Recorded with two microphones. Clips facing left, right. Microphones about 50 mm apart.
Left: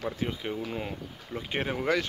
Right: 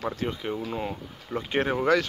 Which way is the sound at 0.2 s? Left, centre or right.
Centre.